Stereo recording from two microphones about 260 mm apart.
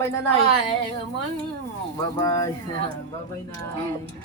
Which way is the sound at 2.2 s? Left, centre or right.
Centre.